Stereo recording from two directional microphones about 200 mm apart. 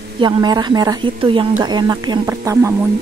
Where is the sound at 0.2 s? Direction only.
20° right (ahead or behind).